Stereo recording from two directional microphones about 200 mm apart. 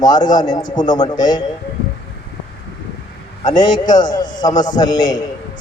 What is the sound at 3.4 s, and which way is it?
A man's voice, 20° left (ahead or behind).